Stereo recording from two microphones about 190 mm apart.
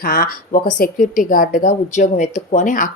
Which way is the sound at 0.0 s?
50° left (ahead or behind).